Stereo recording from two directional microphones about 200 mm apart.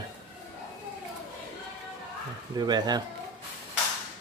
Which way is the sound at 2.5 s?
20° right (ahead or behind).